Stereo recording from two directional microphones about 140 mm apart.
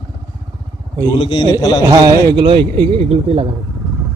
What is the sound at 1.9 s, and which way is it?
Speech, 25° right (ahead or behind).